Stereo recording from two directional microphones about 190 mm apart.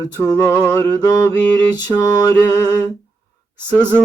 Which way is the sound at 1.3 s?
5° left (ahead or behind).